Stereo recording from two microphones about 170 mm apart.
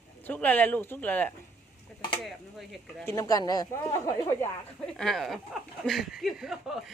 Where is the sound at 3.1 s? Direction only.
20° left (ahead or behind).